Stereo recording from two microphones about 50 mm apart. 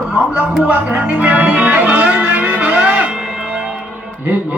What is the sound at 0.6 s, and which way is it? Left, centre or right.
Music, right.